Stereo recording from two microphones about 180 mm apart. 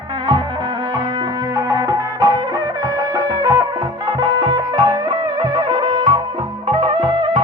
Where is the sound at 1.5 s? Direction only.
20° right (ahead or behind).